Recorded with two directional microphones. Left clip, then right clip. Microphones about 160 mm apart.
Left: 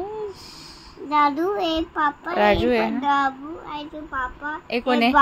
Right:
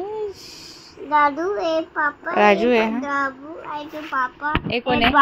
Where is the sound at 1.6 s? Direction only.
35° left (ahead or behind).